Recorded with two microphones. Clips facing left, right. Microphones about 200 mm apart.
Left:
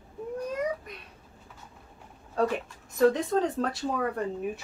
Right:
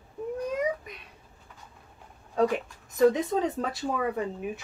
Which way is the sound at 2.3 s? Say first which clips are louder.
Right 2 dB; centre (ahead or behind).